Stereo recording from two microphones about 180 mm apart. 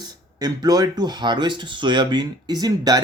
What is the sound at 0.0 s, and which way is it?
Speech, 20° right (ahead or behind).